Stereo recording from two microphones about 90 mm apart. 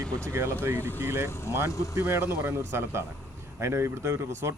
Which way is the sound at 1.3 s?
30° left (ahead or behind).